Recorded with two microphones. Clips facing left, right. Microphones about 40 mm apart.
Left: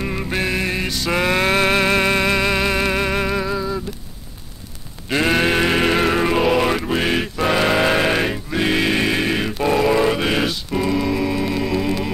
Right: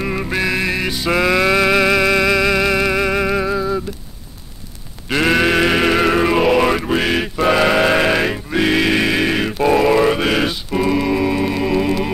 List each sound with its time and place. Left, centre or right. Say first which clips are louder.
0.0 s music: right 3 dB; centre
0.4 s music: right 2 dB; right
0.8 s mantra: right 3 dB; centre
1.2 s music: right 3 dB; left
3.3 s music: right 3 dB; centre
5.2 s sheep: right 3 dB; right
5.6 s music: right 2 dB; centre